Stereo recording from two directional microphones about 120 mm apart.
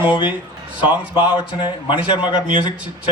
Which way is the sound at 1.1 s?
40° left (ahead or behind).